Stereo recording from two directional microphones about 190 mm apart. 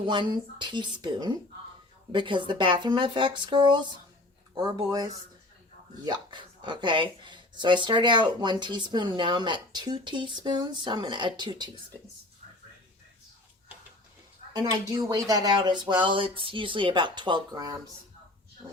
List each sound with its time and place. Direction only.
0.0 s speech: 25° right (ahead or behind)
14.7 s speech: 20° right (ahead or behind)